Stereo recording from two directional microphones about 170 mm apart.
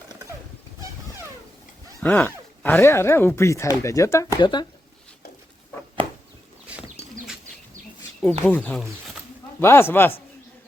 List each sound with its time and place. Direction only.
0.8 s a sound: 15° right (ahead or behind)
2.0 s speech: 5° left (ahead or behind)
4.4 s speech: 30° left (ahead or behind)
8.2 s speech: 5° left (ahead or behind)